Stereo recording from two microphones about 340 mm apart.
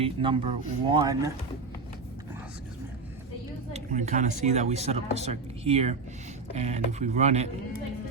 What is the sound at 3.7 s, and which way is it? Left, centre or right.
Speech, right.